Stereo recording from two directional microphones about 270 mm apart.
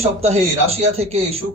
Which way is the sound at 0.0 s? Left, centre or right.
Right.